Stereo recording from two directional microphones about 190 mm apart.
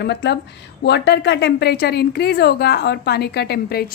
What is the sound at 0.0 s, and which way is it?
A woman's voice, 65° left (ahead or behind).